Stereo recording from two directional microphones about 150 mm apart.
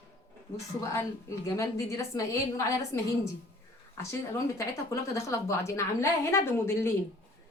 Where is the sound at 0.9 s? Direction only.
20° left (ahead or behind).